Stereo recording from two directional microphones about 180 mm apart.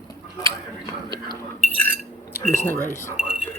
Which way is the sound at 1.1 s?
25° right (ahead or behind).